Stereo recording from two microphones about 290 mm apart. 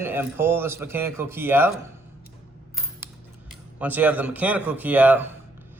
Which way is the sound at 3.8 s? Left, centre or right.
Centre.